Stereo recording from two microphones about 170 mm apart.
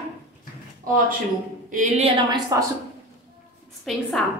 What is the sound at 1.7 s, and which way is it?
Speech, 45° right (ahead or behind).